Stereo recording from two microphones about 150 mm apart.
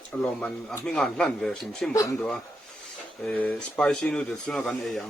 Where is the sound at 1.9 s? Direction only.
20° left (ahead or behind).